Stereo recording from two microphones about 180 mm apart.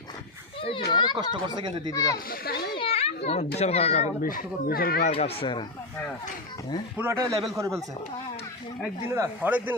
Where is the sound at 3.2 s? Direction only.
35° left (ahead or behind); by 5.1 s 55° left (ahead or behind).